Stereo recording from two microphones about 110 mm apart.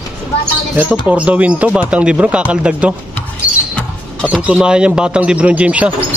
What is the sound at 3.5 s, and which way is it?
Rodents, 15° right (ahead or behind).